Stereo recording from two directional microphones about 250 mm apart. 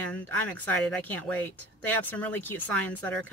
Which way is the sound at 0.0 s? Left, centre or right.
Centre.